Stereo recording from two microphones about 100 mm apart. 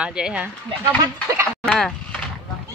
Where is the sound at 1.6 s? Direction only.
5° left (ahead or behind).